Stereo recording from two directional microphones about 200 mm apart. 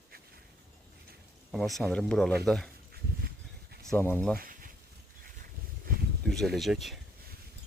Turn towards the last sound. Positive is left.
turn(degrees=0)  # may be behind; listen again after turning